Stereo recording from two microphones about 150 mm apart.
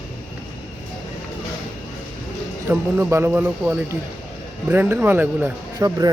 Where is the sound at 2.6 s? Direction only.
15° right (ahead or behind).